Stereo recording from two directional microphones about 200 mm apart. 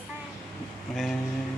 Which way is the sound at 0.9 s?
Centre (ahead or behind).